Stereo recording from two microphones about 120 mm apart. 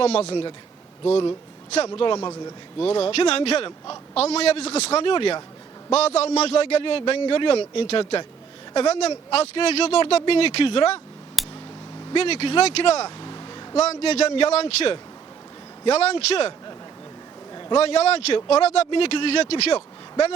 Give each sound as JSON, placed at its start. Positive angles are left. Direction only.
{"t": 0.0, "sound": "speech", "side_deg": 55}
{"t": 1.9, "sound": "a man's voice", "side_deg": 40}
{"t": 2.8, "sound": "speech", "side_deg": 55}
{"t": 5.9, "sound": "a man's voice", "side_deg": 60}
{"t": 11.4, "sound": "a sound", "side_deg": 0}
{"t": 12.1, "sound": "speech", "side_deg": 55}
{"t": 13.1, "sound": "vehicle", "side_deg": 40}
{"t": 13.7, "sound": "speech", "side_deg": 60}
{"t": 17.5, "sound": "a sound", "side_deg": 40}
{"t": 17.7, "sound": "speech", "side_deg": 60}